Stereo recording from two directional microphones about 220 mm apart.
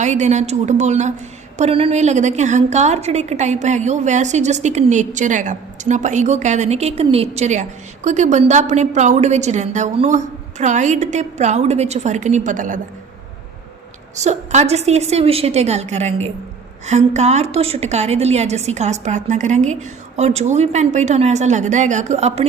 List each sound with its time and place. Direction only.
0.0 s a woman's voice: 30° right (ahead or behind)
14.2 s a woman's voice: 30° right (ahead or behind)